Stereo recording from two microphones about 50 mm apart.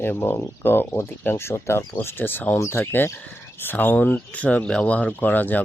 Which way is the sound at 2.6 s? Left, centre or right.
Left.